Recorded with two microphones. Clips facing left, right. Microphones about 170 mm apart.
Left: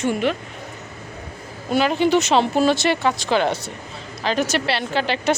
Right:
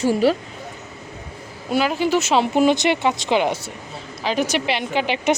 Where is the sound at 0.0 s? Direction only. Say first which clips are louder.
Right 4 dB; 35° right (ahead or behind).